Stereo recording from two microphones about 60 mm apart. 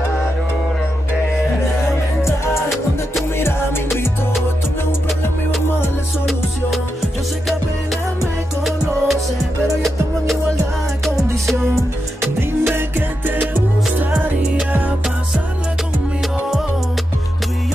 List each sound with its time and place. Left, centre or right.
3.3 s music: left
8.6 s music: centre
12.2 s music: right
14.2 s music: right